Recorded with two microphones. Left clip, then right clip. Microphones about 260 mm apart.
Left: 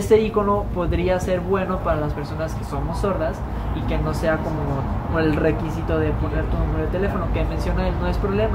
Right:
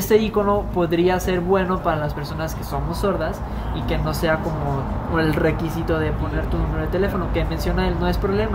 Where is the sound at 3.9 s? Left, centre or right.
Right.